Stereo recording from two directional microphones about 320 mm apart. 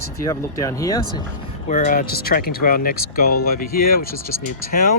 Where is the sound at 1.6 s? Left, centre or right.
Left.